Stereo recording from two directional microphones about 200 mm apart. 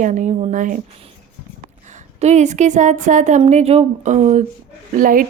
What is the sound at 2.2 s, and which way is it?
Speech, 35° right (ahead or behind).